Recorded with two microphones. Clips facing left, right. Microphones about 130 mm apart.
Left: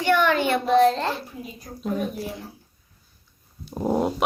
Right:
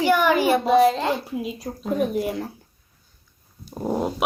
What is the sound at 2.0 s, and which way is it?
Speech, 65° right (ahead or behind).